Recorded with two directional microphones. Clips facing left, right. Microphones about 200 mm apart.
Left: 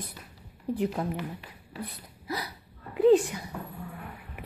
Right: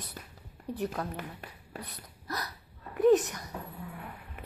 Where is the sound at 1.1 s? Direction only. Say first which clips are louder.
Left 5 dB; 50° right (ahead or behind).